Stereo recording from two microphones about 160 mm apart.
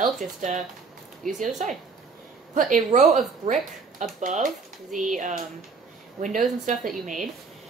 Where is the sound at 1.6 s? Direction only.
55° right (ahead or behind).